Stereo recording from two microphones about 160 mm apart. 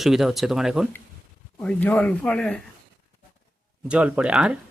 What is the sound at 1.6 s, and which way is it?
Speech, 10° left (ahead or behind).